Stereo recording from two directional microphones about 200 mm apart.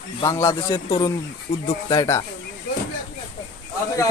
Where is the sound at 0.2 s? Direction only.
15° left (ahead or behind).